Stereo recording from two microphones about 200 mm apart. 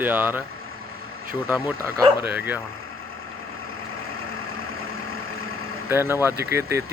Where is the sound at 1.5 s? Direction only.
10° right (ahead or behind).